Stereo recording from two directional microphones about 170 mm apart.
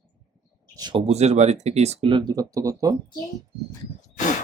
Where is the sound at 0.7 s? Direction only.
25° right (ahead or behind).